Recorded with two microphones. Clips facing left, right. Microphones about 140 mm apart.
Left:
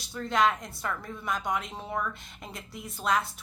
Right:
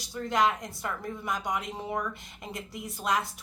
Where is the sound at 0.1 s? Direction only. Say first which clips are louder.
Even; 15° right (ahead or behind).